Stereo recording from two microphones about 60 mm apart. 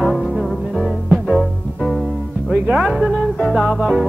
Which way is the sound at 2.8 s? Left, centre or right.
Centre.